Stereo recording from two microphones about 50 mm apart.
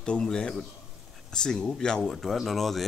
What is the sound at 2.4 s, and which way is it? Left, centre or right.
Speech, centre.